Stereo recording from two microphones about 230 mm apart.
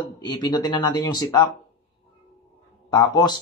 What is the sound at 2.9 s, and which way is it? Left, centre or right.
Speech, centre.